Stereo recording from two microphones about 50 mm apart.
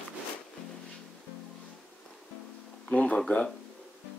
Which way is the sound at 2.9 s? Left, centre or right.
Left.